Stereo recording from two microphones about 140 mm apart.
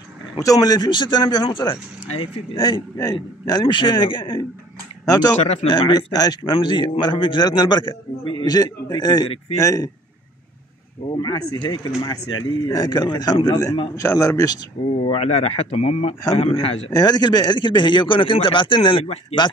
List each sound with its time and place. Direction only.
0.4 s a man's voice: 25° left (ahead or behind)
5.3 s speech: 55° left (ahead or behind)
5.7 s a man's voice: 30° left (ahead or behind)
11.1 s a man's voice: 30° left (ahead or behind)
15.0 s a man's voice: 50° left (ahead or behind)
16.9 s a man's voice: 30° left (ahead or behind)